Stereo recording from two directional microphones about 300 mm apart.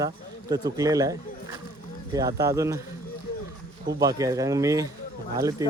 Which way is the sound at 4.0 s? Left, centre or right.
Centre.